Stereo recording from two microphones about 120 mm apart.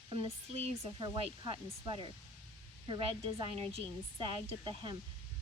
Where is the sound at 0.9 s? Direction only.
45° right (ahead or behind).